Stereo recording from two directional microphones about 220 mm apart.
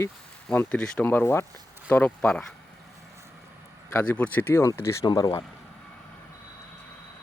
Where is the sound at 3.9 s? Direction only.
10° left (ahead or behind).